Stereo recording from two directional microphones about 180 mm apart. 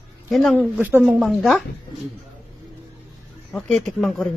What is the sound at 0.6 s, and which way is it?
Speech, 10° right (ahead or behind).